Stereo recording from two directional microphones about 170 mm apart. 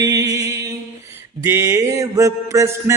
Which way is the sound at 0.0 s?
20° right (ahead or behind).